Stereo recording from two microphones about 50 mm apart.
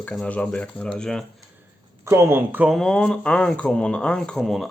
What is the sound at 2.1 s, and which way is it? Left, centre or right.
Speech, right.